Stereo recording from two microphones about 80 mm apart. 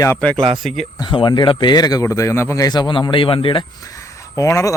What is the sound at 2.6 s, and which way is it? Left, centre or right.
Speech, left.